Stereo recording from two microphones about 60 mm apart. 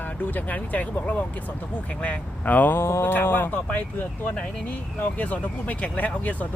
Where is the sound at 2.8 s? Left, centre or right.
Left.